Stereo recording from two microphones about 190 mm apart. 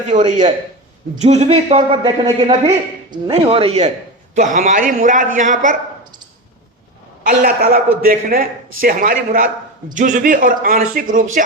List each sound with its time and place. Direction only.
0.3 s a man's voice: 40° right (ahead or behind)
7.3 s a man's voice: 50° right (ahead or behind)